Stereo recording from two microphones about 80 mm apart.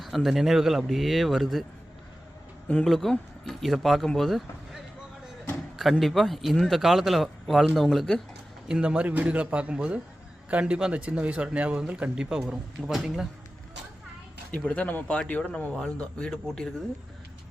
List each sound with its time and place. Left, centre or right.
0.0 s speech: centre
2.8 s speech: centre
8.6 s a man's voice: centre
14.5 s speech: centre